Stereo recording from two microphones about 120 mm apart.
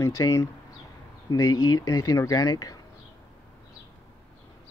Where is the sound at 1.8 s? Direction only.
30° left (ahead or behind).